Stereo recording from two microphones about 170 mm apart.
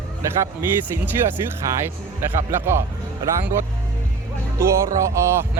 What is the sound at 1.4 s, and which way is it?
Speech, 15° right (ahead or behind).